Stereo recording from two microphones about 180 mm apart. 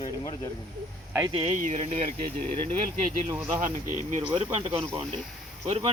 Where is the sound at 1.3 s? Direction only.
30° right (ahead or behind).